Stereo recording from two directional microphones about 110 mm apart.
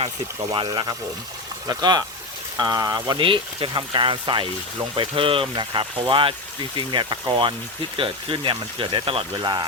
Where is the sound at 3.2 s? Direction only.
50° right (ahead or behind).